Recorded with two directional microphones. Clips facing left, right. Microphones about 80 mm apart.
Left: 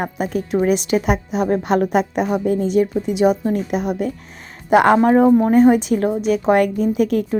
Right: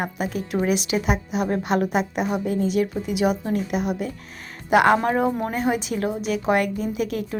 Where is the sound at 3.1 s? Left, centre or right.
Left.